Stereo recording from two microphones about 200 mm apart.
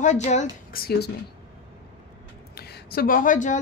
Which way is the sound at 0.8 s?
55° left (ahead or behind).